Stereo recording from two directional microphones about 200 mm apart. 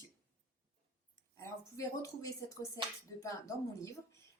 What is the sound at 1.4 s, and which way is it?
Speech, 15° left (ahead or behind).